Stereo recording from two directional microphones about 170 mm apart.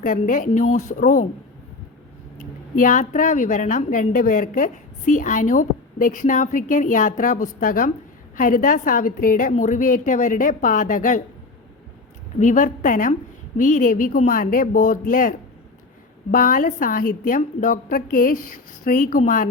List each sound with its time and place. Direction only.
0.0 s a woman's voice: 50° left (ahead or behind)
2.7 s a woman's voice: 50° left (ahead or behind)
12.4 s a woman's voice: 50° left (ahead or behind)